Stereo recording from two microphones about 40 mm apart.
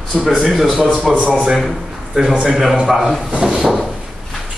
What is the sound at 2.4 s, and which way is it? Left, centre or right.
Speech, centre.